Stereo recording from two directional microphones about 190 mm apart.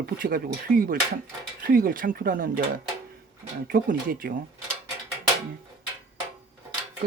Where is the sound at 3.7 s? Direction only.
50° right (ahead or behind).